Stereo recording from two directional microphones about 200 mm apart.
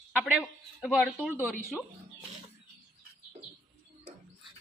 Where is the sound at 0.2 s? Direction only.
5° right (ahead or behind).